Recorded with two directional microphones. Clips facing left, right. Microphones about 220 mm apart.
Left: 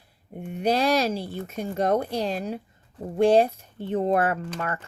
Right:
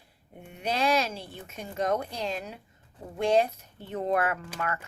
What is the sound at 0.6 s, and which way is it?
A woman's voice, 35° left (ahead or behind).